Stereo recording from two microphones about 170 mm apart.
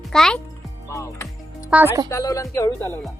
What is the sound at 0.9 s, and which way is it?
Music, 15° left (ahead or behind).